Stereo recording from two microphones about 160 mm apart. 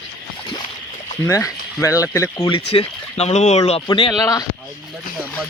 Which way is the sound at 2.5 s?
35° left (ahead or behind).